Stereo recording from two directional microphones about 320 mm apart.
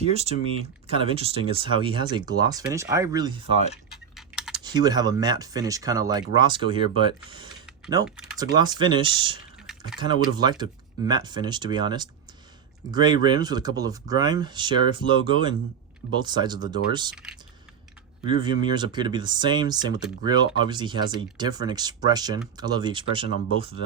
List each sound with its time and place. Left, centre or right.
0.0 s speech: centre
3.6 s speech: centre
4.1 s typing: centre
4.6 s speech: centre
8.0 s speech: centre
8.5 s speech: centre
18.7 s speech: centre